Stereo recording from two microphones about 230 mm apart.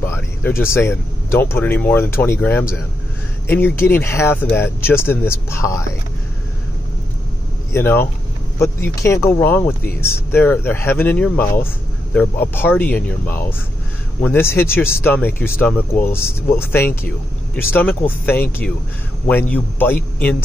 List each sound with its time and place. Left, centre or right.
0.0 s speech: centre
7.7 s speech: centre